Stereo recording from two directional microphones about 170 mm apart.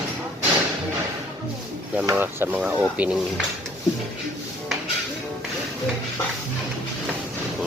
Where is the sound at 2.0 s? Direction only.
15° right (ahead or behind).